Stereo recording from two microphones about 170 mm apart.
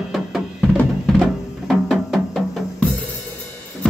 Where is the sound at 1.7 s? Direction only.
Centre (ahead or behind).